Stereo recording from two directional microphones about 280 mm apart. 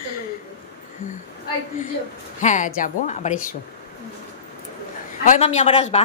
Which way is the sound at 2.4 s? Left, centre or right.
Left.